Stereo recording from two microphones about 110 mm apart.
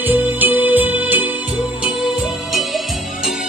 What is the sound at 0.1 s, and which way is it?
Music, 15° right (ahead or behind).